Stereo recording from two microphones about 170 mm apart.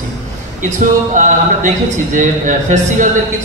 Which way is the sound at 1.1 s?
50° right (ahead or behind).